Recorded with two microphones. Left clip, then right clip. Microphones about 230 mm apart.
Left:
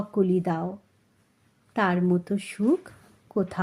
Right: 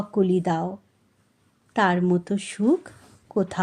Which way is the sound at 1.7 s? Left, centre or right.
Centre.